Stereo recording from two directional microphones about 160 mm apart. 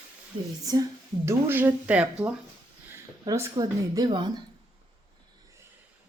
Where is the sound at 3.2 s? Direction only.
20° right (ahead or behind).